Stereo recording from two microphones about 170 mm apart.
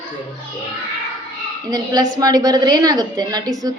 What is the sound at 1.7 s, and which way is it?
A woman's voice, 20° right (ahead or behind).